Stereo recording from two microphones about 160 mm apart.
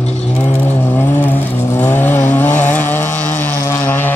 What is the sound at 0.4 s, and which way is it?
Vehicle, 10° left (ahead or behind).